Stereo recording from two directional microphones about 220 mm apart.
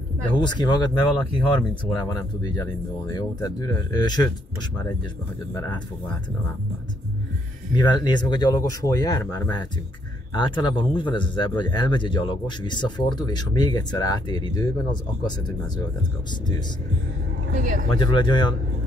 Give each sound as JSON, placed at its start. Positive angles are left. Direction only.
{"t": 0.4, "sound": "speech", "side_deg": 20}
{"t": 5.5, "sound": "speech", "side_deg": 15}
{"t": 7.7, "sound": "speech", "side_deg": 20}
{"t": 17.6, "sound": "speech", "side_deg": -35}
{"t": 17.9, "sound": "speech", "side_deg": 20}